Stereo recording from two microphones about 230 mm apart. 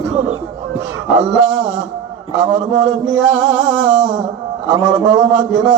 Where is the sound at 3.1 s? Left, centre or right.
Centre.